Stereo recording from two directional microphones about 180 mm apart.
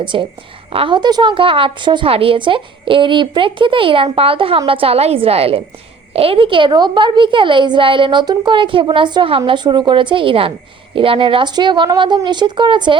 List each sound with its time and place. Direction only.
0.0 s a woman's voice: 25° right (ahead or behind)